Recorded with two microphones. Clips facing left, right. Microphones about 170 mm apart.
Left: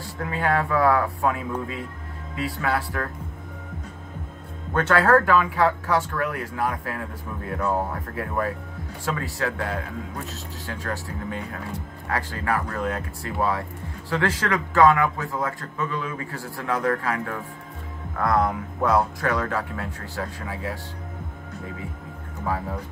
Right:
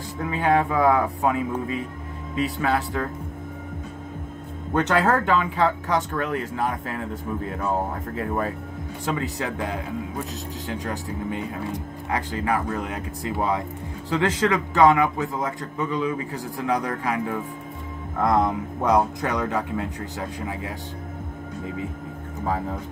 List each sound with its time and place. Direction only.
0.2 s a man's voice: 20° right (ahead or behind)
4.7 s a man's voice: 20° right (ahead or behind)
9.0 s a man's voice: 20° right (ahead or behind)